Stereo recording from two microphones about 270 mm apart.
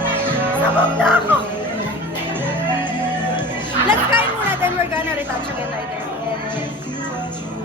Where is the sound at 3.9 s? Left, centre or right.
Centre.